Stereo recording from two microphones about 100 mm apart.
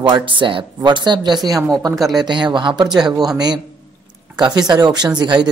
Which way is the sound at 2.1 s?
45° right (ahead or behind).